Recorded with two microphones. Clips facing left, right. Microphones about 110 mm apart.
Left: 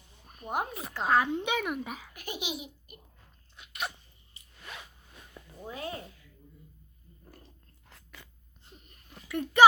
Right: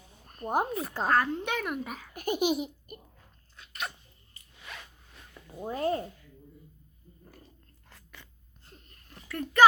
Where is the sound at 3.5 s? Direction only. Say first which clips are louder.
Left 1 dB; 10° left (ahead or behind).